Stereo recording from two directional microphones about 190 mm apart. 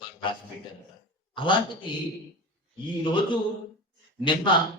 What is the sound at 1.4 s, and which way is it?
Speech, 25° left (ahead or behind).